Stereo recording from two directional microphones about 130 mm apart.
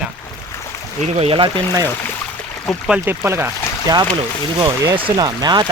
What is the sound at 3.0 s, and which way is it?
Speech, 20° right (ahead or behind).